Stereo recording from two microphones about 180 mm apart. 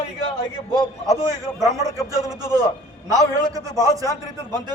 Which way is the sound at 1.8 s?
20° right (ahead or behind).